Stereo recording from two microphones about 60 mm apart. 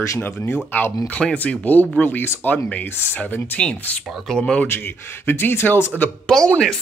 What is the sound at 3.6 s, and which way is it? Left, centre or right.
Speech, centre.